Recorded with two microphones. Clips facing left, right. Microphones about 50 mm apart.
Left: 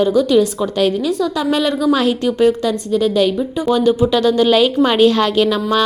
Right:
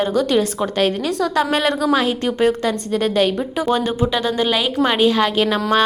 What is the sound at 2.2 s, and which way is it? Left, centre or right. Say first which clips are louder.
A woman's voice: left 3 dB; right.